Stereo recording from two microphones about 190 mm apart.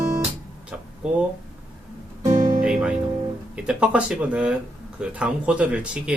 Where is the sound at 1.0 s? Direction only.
5° right (ahead or behind).